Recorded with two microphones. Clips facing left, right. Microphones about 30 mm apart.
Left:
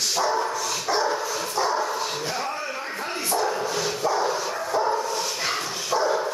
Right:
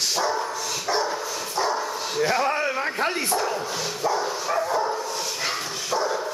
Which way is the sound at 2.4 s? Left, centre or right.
Right.